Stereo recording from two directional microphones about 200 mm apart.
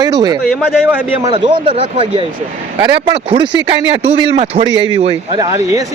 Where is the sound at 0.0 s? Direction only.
20° right (ahead or behind).